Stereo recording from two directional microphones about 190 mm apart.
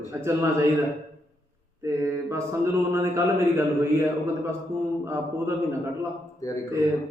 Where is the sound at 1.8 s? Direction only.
15° right (ahead or behind).